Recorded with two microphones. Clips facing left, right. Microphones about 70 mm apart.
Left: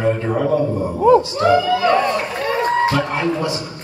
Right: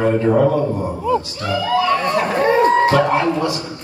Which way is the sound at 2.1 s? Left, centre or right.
Right.